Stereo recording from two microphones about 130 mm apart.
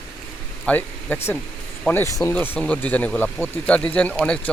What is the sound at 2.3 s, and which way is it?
Speech, 10° left (ahead or behind).